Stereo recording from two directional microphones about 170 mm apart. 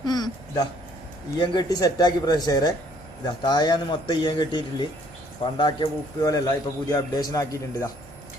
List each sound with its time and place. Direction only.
0.0 s a man's voice: 25° left (ahead or behind)